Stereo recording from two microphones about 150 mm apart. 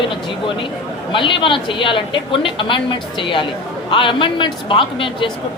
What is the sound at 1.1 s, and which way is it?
A woman's voice, 35° left (ahead or behind).